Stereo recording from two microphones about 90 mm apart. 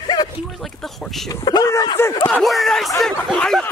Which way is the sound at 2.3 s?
Centre (ahead or behind).